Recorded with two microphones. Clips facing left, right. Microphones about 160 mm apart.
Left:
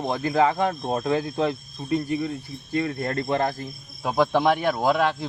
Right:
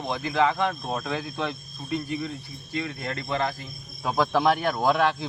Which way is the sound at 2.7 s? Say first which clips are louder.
Left 6 dB; 45° left (ahead or behind).